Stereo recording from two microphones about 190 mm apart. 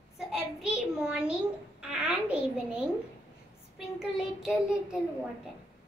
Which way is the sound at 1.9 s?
5° right (ahead or behind).